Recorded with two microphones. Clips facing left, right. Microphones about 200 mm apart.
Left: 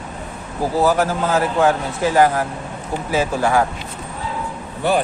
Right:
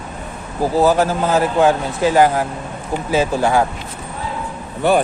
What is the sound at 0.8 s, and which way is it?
A man's voice, 20° right (ahead or behind).